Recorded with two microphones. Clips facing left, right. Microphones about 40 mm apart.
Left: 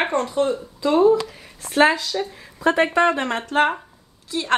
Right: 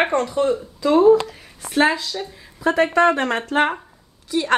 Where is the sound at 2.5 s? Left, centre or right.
Left.